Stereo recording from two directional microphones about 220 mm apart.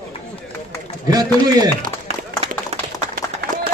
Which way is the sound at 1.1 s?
15° right (ahead or behind).